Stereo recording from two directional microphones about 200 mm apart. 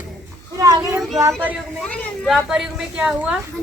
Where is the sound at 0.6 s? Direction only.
15° right (ahead or behind).